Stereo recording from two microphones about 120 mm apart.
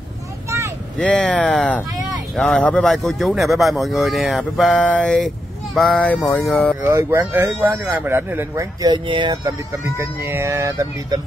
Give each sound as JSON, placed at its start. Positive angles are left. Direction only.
{"t": 0.9, "sound": "speech", "side_deg": 10}
{"t": 6.0, "sound": "speech", "side_deg": 15}
{"t": 6.8, "sound": "speech", "side_deg": -20}
{"t": 8.8, "sound": "speech", "side_deg": -40}
{"t": 9.7, "sound": "speech", "side_deg": -20}